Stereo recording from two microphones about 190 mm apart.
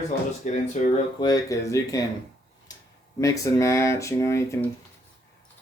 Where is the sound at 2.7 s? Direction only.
20° left (ahead or behind).